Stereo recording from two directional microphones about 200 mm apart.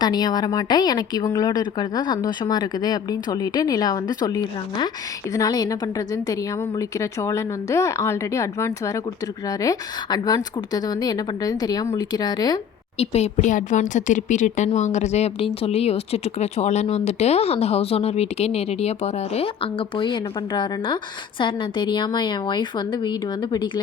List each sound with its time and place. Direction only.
0.0 s a woman's voice: 20° left (ahead or behind)
13.0 s a woman's voice: 30° left (ahead or behind)